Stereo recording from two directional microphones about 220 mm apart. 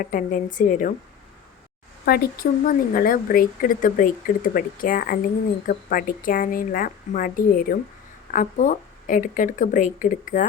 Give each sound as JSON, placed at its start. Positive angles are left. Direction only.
{"t": 0.0, "sound": "speech", "side_deg": 35}
{"t": 2.0, "sound": "speech", "side_deg": 45}